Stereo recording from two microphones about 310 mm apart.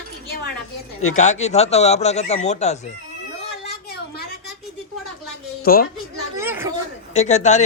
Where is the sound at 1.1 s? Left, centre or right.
Left.